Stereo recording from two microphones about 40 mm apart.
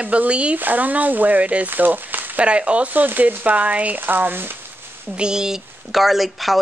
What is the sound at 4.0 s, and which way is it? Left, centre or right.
Frying, right.